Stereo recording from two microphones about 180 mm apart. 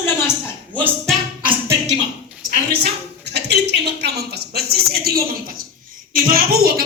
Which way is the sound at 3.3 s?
70° right (ahead or behind).